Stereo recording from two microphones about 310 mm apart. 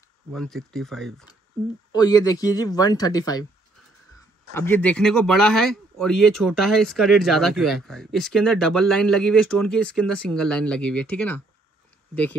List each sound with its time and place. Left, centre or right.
0.3 s speech: centre
1.9 s speech: centre
4.6 s speech: centre